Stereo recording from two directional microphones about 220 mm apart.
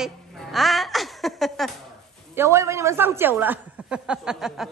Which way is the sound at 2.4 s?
15° right (ahead or behind).